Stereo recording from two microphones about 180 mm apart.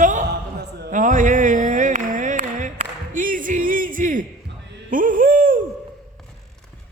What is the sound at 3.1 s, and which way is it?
Music, 50° right (ahead or behind).